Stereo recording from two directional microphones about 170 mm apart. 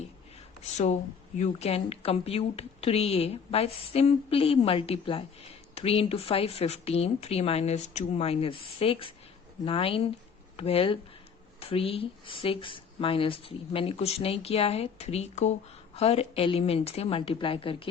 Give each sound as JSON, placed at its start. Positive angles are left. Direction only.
{"t": 0.6, "sound": "speech", "side_deg": 45}